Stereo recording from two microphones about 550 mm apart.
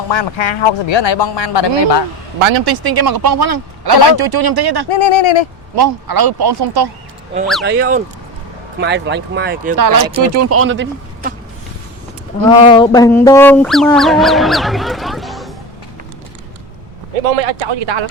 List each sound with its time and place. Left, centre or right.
0.1 s a man's voice: left
2.4 s speech: right
4.9 s speech: left
5.7 s speech: right
7.6 s speech: centre
9.7 s speech: right
10.3 s speech: right
12.5 s quack: centre
17.2 s speech: right
17.7 s speech: right